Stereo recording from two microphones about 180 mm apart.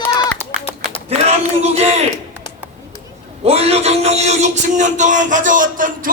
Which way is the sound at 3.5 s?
35° right (ahead or behind).